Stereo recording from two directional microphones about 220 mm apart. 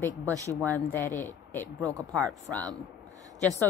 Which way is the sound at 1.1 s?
35° left (ahead or behind).